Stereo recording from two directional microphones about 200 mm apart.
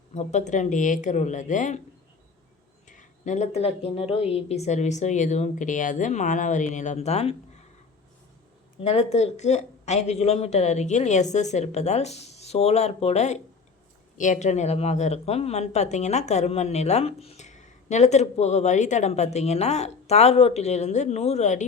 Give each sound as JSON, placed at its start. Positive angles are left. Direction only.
{"t": 0.1, "sound": "speech", "side_deg": 35}
{"t": 2.8, "sound": "speech", "side_deg": 40}
{"t": 8.8, "sound": "speech", "side_deg": 30}